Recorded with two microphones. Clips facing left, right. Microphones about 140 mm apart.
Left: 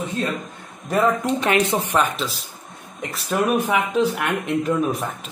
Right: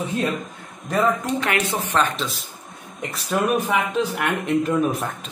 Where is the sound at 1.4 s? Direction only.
20° left (ahead or behind).